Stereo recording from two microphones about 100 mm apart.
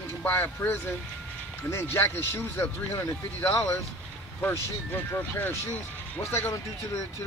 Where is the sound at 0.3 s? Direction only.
25° left (ahead or behind).